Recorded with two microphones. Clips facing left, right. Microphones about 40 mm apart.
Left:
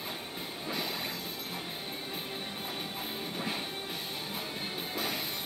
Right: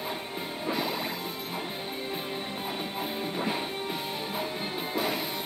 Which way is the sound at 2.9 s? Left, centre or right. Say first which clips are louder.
Right 6 dB; centre.